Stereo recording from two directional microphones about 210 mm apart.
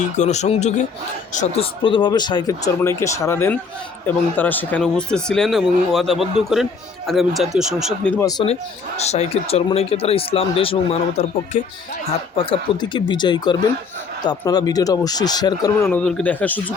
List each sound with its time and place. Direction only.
0.0 s speech: 35° left (ahead or behind)
1.8 s speech: 20° left (ahead or behind); by 8.3 s 5° left (ahead or behind)
9.0 s speech: 30° left (ahead or behind)
15.9 s speech: 5° left (ahead or behind)